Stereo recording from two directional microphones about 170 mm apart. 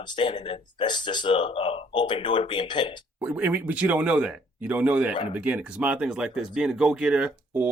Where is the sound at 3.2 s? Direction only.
10° right (ahead or behind).